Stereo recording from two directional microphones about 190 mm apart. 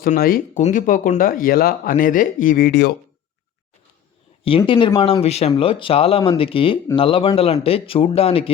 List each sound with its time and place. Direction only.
0.0 s speech: 50° left (ahead or behind)
4.4 s speech: 25° left (ahead or behind)